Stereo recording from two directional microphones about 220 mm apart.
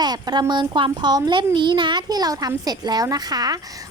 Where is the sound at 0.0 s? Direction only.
20° right (ahead or behind).